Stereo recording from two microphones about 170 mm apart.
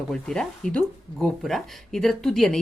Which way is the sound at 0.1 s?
5° left (ahead or behind).